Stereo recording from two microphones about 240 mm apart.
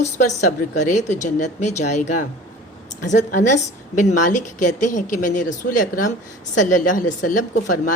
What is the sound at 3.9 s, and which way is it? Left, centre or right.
Speech, left.